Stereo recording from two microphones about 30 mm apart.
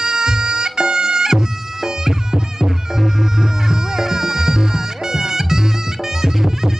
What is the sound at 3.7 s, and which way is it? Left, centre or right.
Music, centre.